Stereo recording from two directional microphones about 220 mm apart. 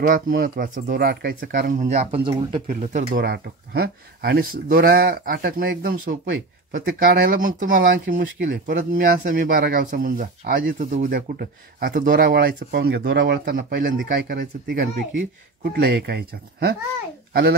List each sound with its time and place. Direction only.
0.0 s speech: 40° right (ahead or behind)
3.3 s a child's voice: 45° right (ahead or behind)